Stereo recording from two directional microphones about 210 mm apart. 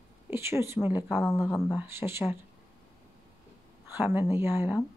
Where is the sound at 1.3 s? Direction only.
15° left (ahead or behind).